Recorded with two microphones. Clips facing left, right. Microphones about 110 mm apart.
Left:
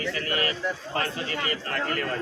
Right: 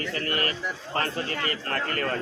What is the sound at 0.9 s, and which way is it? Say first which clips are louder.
A man's voice: right 5 dB; 45° right (ahead or behind).